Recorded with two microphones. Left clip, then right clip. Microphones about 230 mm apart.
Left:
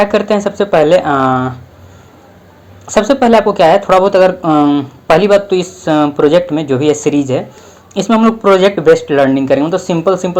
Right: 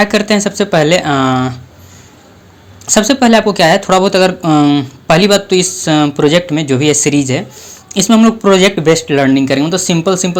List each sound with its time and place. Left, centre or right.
0.0 s speech: right
2.8 s speech: right